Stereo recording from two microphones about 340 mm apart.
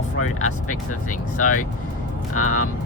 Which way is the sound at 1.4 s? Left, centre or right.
Left.